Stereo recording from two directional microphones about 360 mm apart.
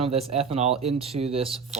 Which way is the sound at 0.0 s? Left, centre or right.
Centre.